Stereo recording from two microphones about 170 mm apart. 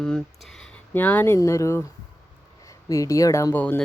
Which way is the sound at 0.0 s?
5° left (ahead or behind).